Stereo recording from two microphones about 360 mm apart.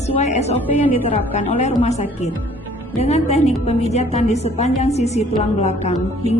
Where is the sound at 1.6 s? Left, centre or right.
Centre.